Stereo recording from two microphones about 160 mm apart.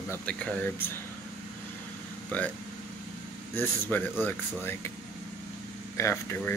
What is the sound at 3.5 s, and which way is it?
Speech, 10° left (ahead or behind).